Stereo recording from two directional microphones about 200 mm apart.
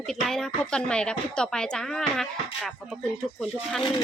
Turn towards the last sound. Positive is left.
turn(degrees=0)  # may be behind; listen again after turning